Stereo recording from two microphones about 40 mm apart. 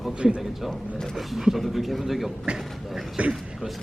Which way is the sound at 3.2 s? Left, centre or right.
Right.